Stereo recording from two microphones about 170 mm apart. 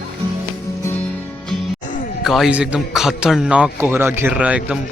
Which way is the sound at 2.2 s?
Centre (ahead or behind).